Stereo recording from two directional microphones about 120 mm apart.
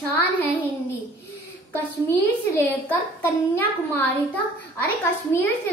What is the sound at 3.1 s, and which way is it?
Speech, 15° left (ahead or behind).